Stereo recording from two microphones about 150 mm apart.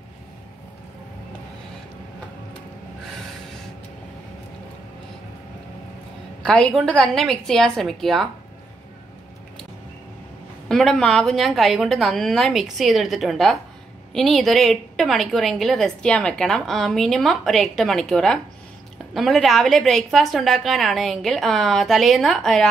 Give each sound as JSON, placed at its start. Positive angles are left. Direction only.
{"t": 6.4, "sound": "a woman's voice", "side_deg": 5}
{"t": 10.7, "sound": "a woman's voice", "side_deg": 5}